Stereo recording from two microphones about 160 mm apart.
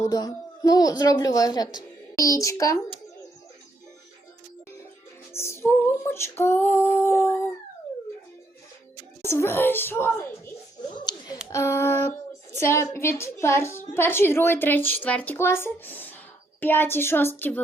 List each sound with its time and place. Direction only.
0.0 s a woman's voice: 20° left (ahead or behind)
5.3 s a woman's voice: 15° left (ahead or behind)
9.2 s a woman's voice: 15° left (ahead or behind)
10.9 s a sound: 25° left (ahead or behind)
11.5 s a woman's voice: 15° left (ahead or behind)